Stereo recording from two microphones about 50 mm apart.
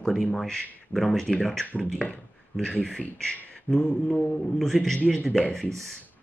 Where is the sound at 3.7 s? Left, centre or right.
Centre.